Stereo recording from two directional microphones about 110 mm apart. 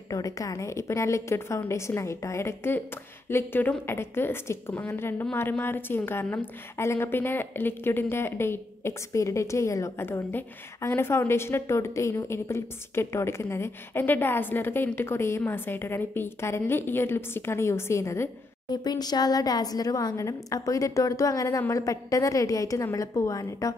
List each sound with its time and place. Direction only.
0.1 s a woman's voice: 30° left (ahead or behind)
18.7 s a woman's voice: 40° left (ahead or behind)